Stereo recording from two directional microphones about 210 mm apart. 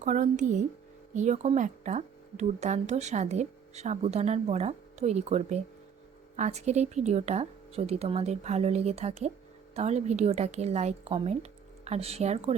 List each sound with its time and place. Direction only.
0.0 s a woman's voice: 35° right (ahead or behind)